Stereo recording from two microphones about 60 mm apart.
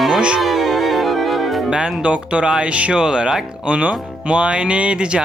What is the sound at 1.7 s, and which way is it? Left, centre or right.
Speech, centre.